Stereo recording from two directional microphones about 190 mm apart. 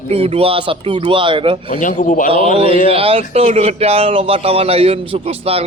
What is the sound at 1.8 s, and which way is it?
Speech, 45° left (ahead or behind).